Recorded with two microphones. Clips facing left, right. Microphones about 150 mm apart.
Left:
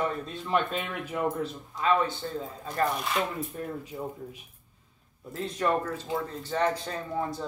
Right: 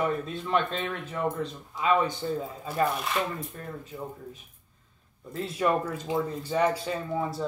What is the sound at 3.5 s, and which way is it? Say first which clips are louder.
Speech: left 3 dB; 10° left (ahead or behind).